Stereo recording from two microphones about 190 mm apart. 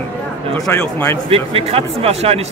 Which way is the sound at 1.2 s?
30° right (ahead or behind).